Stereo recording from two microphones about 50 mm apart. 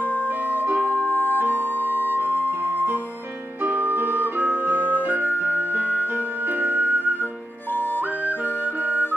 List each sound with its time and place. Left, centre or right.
0.0 s music: left
0.7 s music: right
0.9 s music: left
2.1 s music: right
4.5 s flute: left
5.4 s music: right